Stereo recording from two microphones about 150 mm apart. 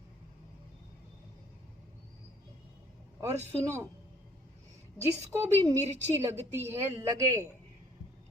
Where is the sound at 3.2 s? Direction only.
20° right (ahead or behind).